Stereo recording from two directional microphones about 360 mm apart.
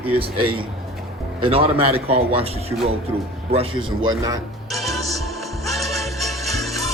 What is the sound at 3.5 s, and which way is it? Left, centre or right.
Speech, centre.